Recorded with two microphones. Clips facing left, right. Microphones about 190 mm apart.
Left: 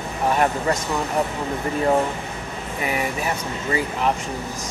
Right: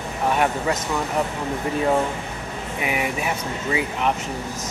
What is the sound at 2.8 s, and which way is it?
Speech, 10° right (ahead or behind).